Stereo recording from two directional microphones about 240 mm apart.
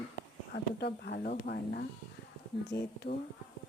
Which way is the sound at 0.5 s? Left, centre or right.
Left.